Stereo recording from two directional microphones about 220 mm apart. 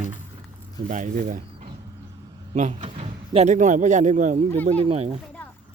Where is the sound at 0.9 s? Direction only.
35° right (ahead or behind).